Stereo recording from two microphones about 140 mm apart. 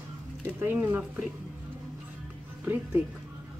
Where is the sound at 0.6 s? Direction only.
15° right (ahead or behind).